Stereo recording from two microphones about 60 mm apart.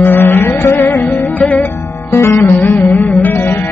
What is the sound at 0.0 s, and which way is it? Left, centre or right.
Music, left.